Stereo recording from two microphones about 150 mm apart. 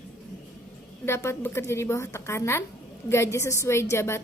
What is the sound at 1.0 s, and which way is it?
A woman's voice, 15° left (ahead or behind).